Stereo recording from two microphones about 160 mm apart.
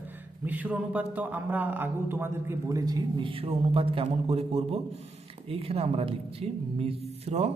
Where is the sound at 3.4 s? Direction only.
35° right (ahead or behind).